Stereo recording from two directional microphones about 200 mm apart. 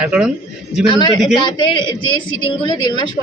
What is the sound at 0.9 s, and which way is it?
A woman's voice, 20° left (ahead or behind).